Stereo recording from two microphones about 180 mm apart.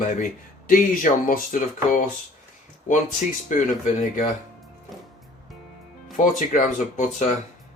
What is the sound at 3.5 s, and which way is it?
Speech, 45° left (ahead or behind).